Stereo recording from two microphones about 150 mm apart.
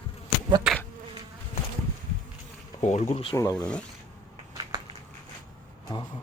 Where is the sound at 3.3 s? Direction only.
25° left (ahead or behind).